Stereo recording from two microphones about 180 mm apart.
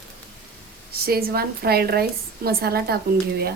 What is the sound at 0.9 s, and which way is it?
A woman's voice, 55° right (ahead or behind).